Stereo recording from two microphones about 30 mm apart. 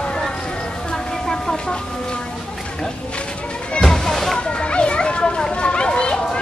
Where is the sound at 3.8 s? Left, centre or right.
Centre.